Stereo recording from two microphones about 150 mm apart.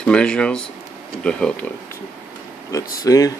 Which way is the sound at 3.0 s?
25° left (ahead or behind).